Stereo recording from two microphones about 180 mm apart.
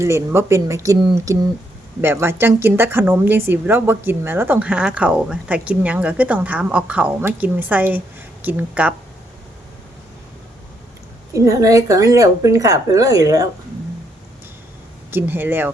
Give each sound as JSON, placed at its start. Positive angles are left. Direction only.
{"t": 0.0, "sound": "speech", "side_deg": -15}
{"t": 11.3, "sound": "speech", "side_deg": -20}
{"t": 15.1, "sound": "speech", "side_deg": -10}